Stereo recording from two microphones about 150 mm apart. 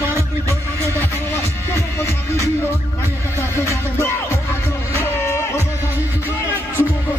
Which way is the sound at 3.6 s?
20° left (ahead or behind).